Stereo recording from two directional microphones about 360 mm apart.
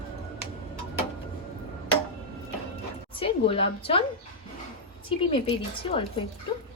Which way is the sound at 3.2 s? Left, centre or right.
Centre.